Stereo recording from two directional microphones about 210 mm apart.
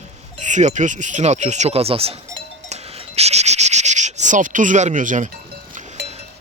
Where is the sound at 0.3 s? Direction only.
35° right (ahead or behind).